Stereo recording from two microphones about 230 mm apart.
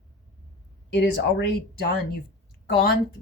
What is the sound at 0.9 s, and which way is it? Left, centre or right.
Speech, left.